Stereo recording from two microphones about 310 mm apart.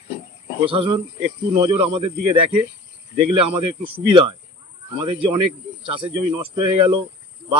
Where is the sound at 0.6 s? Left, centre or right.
Centre.